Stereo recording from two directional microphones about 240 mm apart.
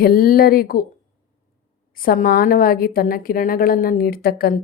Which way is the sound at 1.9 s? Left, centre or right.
Left.